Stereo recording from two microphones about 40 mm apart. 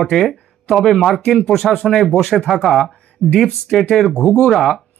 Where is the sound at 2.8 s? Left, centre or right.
Centre.